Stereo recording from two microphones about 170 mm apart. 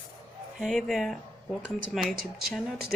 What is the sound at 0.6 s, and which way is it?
Speech, centre (ahead or behind).